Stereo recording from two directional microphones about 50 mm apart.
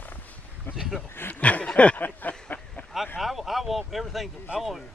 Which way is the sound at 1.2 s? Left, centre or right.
Left.